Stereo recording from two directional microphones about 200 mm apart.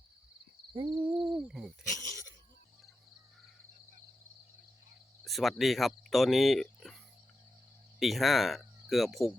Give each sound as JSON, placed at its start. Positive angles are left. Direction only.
{"t": 0.7, "sound": "a sound", "side_deg": -25}
{"t": 1.0, "sound": "owl", "side_deg": -5}
{"t": 1.4, "sound": "hoot", "side_deg": -5}
{"t": 5.2, "sound": "speech", "side_deg": 0}
{"t": 7.9, "sound": "cricket", "side_deg": 0}